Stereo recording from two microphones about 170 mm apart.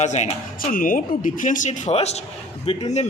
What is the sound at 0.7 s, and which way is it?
A man's voice, 55° left (ahead or behind).